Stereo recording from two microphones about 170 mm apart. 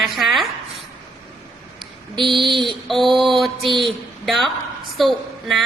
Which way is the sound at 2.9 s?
Centre (ahead or behind).